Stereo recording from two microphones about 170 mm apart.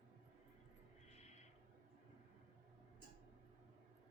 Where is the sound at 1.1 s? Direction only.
40° left (ahead or behind).